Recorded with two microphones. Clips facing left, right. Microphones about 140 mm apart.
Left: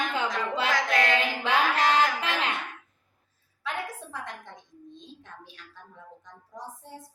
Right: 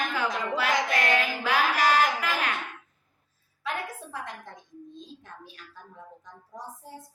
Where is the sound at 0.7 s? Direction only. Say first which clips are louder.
Left 1 dB; 20° right (ahead or behind).